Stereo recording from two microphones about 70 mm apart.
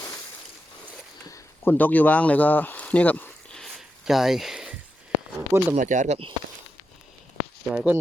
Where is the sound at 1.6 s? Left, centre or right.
Left.